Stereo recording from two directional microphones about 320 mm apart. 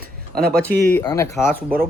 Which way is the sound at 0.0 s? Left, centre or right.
Right.